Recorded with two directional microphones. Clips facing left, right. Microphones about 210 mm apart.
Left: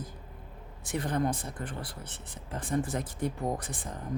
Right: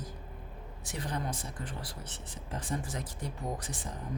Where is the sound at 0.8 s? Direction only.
55° left (ahead or behind).